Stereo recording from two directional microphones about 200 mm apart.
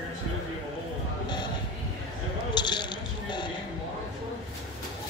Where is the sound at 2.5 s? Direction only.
20° left (ahead or behind).